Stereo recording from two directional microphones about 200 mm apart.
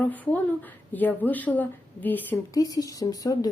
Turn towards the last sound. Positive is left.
turn(degrees=20)  # may be behind; listen again after turning